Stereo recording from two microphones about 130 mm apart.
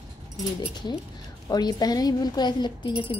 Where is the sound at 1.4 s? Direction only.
30° left (ahead or behind).